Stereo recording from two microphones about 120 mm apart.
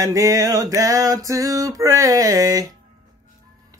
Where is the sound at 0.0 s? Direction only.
25° right (ahead or behind).